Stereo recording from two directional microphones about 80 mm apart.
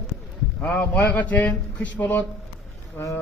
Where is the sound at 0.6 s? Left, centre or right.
Centre.